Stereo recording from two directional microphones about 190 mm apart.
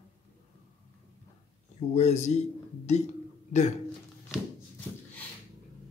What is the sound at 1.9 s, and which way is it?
Speech, 35° left (ahead or behind).